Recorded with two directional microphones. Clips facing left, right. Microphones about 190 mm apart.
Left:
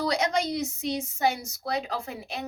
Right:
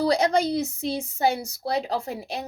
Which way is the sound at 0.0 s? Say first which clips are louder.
Right 5 dB; 35° right (ahead or behind).